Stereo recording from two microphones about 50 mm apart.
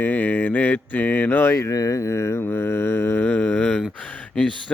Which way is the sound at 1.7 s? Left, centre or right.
Left.